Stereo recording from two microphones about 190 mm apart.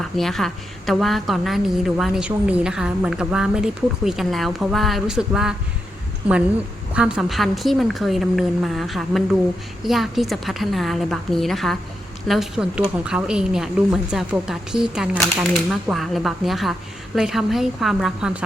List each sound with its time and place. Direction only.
0.0 s a woman's voice: centre (ahead or behind)